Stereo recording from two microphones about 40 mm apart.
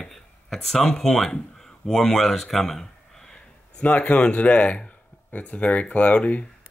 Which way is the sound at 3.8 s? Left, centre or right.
Left.